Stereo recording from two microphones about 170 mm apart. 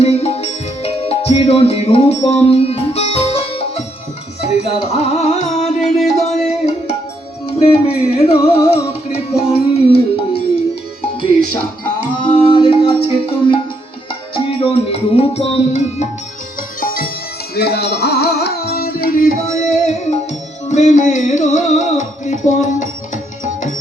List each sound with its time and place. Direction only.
0.0 s music: 35° left (ahead or behind)
5.6 s music: centre (ahead or behind)
6.2 s music: 40° left (ahead or behind)
12.2 s music: 30° left (ahead or behind)
14.7 s music: 35° left (ahead or behind)
16.8 s music: 55° left (ahead or behind)
17.5 s music: 70° left (ahead or behind); by 23.7 s 45° left (ahead or behind)